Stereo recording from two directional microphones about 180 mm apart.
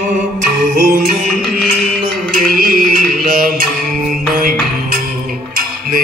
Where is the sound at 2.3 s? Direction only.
50° right (ahead or behind).